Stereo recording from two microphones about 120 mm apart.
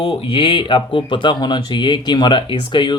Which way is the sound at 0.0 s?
45° left (ahead or behind).